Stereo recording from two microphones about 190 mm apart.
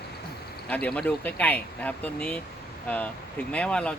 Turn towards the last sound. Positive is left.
turn(degrees=5)  # may be behind; listen again after turning